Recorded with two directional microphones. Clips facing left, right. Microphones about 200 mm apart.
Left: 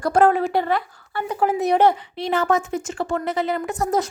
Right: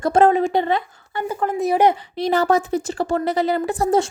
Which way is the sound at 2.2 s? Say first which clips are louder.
Right 3 dB; 40° right (ahead or behind).